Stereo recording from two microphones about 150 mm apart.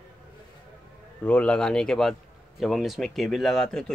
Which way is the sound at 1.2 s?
5° left (ahead or behind).